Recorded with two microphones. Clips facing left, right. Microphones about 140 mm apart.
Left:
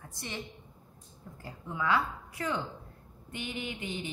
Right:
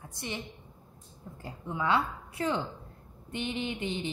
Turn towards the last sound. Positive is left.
turn(degrees=-25)  # may be behind; listen again after turning